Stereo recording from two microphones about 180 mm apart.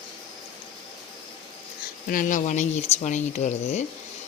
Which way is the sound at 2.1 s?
45° left (ahead or behind).